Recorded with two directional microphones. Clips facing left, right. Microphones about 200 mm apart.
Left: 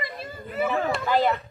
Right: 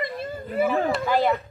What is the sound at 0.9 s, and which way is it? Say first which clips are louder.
Speech: right 1 dB; 10° right (ahead or behind).